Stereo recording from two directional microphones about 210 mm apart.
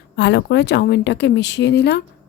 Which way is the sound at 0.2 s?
55° left (ahead or behind).